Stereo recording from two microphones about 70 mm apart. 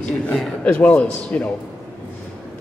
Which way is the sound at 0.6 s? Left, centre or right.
Left.